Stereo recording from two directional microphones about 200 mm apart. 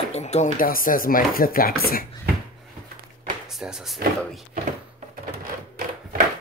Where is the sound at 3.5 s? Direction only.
Centre (ahead or behind).